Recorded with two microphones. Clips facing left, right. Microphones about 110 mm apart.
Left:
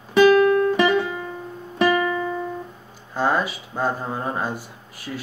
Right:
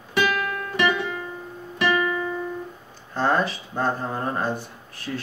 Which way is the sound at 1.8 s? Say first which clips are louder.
Left 3 dB; 30° left (ahead or behind).